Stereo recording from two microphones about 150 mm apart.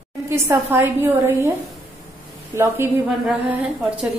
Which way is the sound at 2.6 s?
15° right (ahead or behind).